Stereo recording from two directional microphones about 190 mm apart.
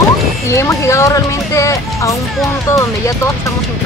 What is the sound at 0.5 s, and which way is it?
Speech, 15° left (ahead or behind).